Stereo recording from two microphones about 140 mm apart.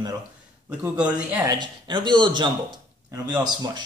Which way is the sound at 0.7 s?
10° right (ahead or behind).